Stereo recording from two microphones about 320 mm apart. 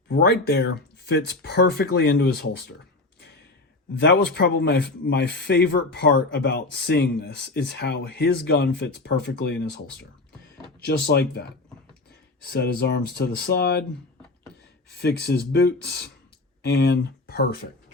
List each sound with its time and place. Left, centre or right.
0.1 s speech: left
4.4 s speech: left
15.0 s speech: left